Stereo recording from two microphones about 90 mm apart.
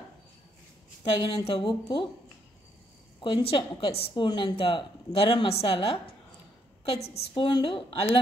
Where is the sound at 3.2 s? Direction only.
80° left.